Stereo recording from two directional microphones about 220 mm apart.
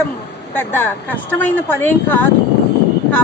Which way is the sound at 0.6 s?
10° left (ahead or behind).